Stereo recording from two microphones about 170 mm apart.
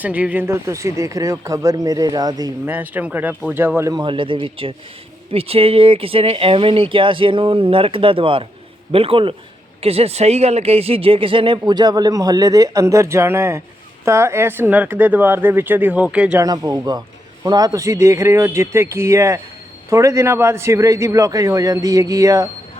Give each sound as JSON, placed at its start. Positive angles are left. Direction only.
{"t": 0.0, "sound": "speech", "side_deg": -10}
{"t": 2.6, "sound": "speech", "side_deg": -10}
{"t": 3.9, "sound": "speech", "side_deg": -30}
{"t": 16.4, "sound": "speech", "side_deg": -20}